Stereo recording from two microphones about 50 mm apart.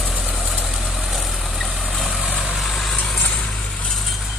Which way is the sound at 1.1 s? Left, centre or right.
Centre.